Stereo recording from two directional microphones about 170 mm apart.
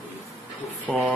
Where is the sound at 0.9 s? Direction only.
Centre (ahead or behind).